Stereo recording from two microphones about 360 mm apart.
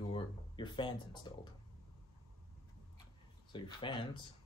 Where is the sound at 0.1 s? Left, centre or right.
Centre.